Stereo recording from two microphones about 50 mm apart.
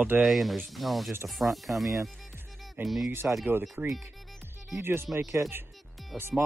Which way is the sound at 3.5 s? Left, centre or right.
Right.